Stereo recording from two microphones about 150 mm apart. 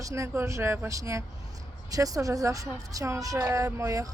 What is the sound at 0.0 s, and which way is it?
A woman's voice, 20° right (ahead or behind).